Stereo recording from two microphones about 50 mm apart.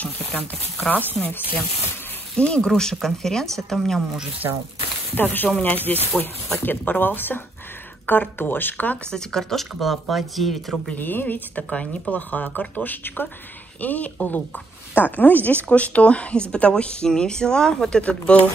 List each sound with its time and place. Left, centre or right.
0.0 s a sound: left
1.2 s speech: left
2.3 s speech: left
2.7 s speech: centre
5.1 s speech: left
9.1 s speech: centre
11.0 s speech: left
11.7 s speech: left
12.3 s speech: left